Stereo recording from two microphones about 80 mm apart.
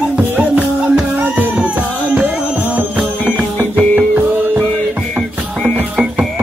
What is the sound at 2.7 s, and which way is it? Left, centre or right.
Music, centre.